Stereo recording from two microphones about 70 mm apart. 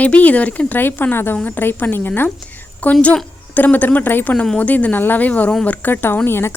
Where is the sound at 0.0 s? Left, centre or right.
Left.